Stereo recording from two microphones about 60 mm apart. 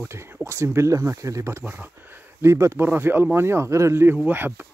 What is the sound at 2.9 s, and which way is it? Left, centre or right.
Speech, right.